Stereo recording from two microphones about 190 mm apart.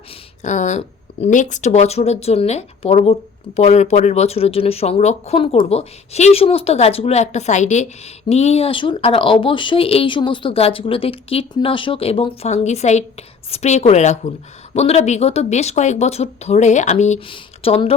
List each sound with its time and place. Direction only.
0.4 s speech: 40° left (ahead or behind)